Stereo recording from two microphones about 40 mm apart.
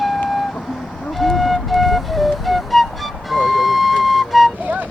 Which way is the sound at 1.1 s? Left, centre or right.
Centre.